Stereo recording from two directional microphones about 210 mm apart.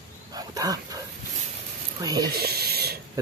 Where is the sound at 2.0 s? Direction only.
20° right (ahead or behind).